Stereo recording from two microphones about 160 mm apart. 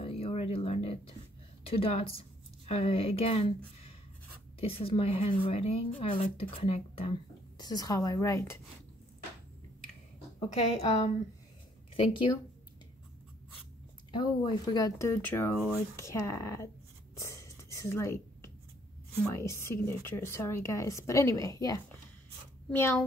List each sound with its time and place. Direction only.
0.0 s a sound: 35° left (ahead or behind)
1.6 s speech: 35° left (ahead or behind)
7.5 s speech: 25° left (ahead or behind)
10.5 s speech: 40° left (ahead or behind)
14.1 s speech: 30° left (ahead or behind)
17.2 s a sound: 20° left (ahead or behind)
19.2 s speech: 15° left (ahead or behind)